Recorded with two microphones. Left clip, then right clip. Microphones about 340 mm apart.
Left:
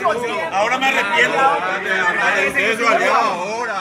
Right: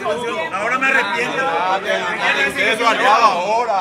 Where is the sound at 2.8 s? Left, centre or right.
Right.